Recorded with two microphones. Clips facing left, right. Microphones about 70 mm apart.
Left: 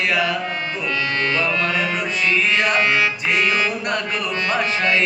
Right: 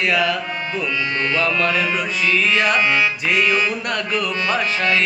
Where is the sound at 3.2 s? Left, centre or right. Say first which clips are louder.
Right 2 dB; centre.